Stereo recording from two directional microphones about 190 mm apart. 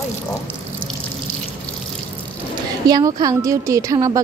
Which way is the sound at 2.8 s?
20° right (ahead or behind).